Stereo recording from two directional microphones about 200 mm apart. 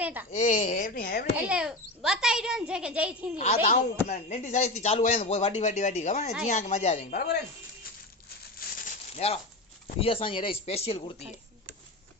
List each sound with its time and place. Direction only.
0.0 s speech: 10° right (ahead or behind)
0.3 s speech: 35° left (ahead or behind)
1.3 s speech: 5° right (ahead or behind)
3.3 s speech: 35° left (ahead or behind)
8.5 s a sound: 40° left (ahead or behind)
9.9 s speech: 25° left (ahead or behind)